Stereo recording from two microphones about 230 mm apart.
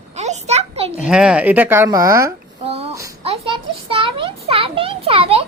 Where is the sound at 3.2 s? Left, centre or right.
Right.